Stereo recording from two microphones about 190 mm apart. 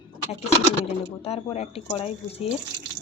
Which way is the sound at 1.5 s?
30° left (ahead or behind).